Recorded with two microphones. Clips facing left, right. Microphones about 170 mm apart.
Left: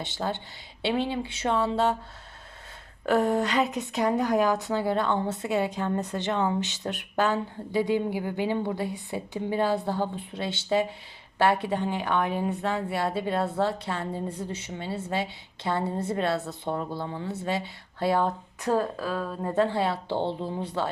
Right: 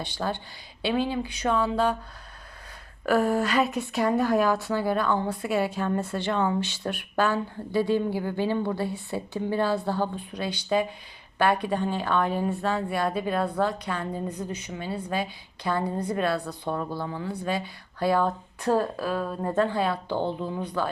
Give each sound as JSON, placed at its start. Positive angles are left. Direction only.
{"t": 0.0, "sound": "a woman's voice", "side_deg": 20}
{"t": 3.1, "sound": "a woman's voice", "side_deg": 20}
{"t": 18.7, "sound": "speech", "side_deg": -15}
{"t": 19.5, "sound": "a woman's voice", "side_deg": 25}